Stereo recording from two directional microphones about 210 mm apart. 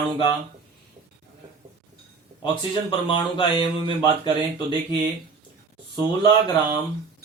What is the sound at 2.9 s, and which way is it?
Speech, 25° left (ahead or behind).